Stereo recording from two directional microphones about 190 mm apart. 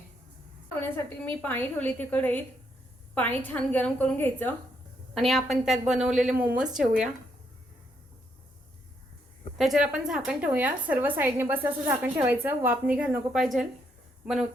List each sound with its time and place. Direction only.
1.4 s a woman's voice: 10° left (ahead or behind)
9.6 s a woman's voice: centre (ahead or behind)